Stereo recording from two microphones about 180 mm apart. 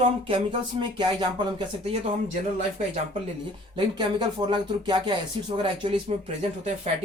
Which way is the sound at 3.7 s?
25° right (ahead or behind).